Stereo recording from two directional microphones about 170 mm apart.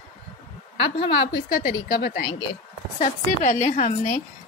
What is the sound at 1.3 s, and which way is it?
Speech, 65° left (ahead or behind).